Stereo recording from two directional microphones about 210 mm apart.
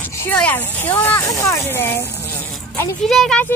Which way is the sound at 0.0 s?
10° left (ahead or behind).